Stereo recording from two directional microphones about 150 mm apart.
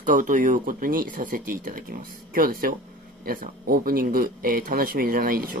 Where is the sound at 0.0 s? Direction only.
60° right (ahead or behind).